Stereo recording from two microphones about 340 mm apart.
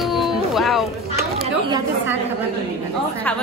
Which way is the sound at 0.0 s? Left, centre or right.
Centre.